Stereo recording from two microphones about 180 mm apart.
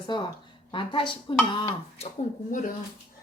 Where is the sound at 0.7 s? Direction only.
25° left (ahead or behind).